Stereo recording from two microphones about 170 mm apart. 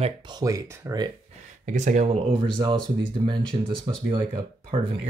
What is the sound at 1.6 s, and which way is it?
Speech, 45° right (ahead or behind).